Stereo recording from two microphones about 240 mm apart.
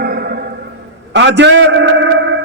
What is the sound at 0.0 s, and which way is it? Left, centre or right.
Music, right.